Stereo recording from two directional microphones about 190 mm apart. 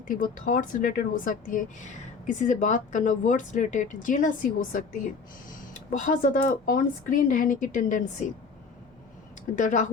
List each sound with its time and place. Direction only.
0.1 s speech: 45° left (ahead or behind)
9.6 s speech: 40° left (ahead or behind)